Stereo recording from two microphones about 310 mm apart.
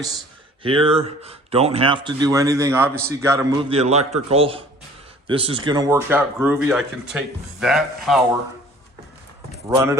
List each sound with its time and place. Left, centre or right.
0.6 s speech: centre
9.6 s speech: centre